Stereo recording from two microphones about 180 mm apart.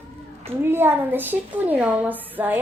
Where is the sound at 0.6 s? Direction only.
10° right (ahead or behind).